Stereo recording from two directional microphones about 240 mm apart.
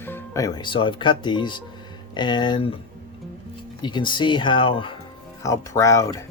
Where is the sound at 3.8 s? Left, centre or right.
Centre.